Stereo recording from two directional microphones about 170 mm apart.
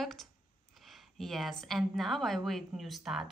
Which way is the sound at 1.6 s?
Centre (ahead or behind).